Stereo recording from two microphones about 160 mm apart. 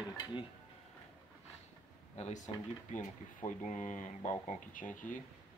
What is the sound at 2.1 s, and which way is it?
Speech, 45° left (ahead or behind).